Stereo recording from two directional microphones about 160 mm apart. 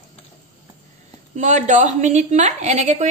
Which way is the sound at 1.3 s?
50° right (ahead or behind).